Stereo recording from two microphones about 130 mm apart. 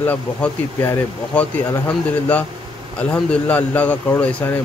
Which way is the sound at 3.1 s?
10° left (ahead or behind).